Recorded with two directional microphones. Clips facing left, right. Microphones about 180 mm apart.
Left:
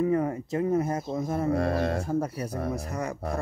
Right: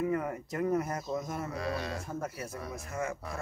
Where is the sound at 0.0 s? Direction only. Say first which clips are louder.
Left 6 dB; 35° left (ahead or behind).